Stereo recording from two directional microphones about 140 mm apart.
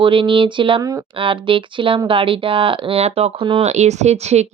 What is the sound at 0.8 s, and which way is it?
Speech, 25° right (ahead or behind).